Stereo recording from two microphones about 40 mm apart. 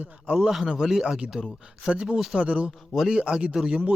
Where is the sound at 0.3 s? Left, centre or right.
Centre.